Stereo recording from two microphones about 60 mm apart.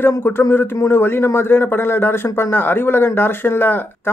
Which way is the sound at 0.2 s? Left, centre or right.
Left.